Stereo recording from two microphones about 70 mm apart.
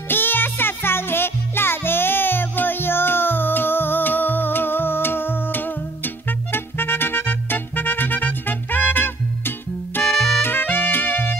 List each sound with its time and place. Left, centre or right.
0.1 s music: left
10.0 s music: centre
10.4 s music: left